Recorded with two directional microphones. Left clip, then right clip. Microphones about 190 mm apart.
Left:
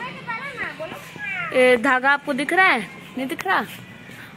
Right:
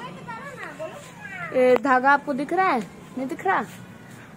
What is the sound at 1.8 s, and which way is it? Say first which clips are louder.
Speech: even; 15° left (ahead or behind).